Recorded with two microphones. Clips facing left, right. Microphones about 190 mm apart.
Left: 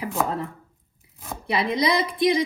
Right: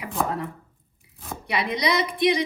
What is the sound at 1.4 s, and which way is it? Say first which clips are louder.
Speech: left 3 dB; 30° left (ahead or behind).